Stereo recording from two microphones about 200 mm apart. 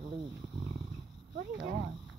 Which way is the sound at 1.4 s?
50° right (ahead or behind).